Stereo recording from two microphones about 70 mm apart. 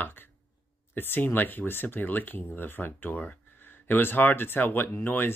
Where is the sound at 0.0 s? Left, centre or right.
Left.